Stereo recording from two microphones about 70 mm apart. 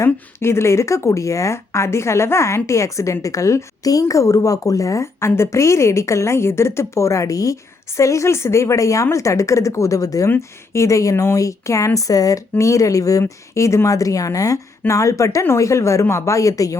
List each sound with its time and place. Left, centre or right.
0.0 s a woman's voice: left
10.2 s a woman's voice: left